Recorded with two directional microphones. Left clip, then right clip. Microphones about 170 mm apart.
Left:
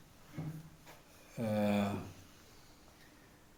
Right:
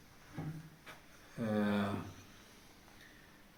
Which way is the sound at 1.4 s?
90° left.